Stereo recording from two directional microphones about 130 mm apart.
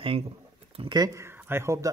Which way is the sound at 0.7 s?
45° right (ahead or behind).